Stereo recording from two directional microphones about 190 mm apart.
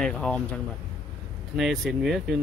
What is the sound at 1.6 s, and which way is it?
Speech, centre (ahead or behind).